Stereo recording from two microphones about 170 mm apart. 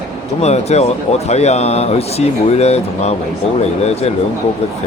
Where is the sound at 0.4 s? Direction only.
40° left (ahead or behind).